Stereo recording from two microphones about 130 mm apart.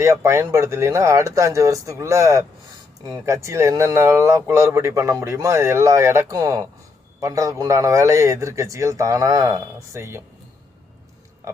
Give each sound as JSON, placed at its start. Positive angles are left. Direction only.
{"t": 0.0, "sound": "a man's voice", "side_deg": -20}
{"t": 11.4, "sound": "speech", "side_deg": -25}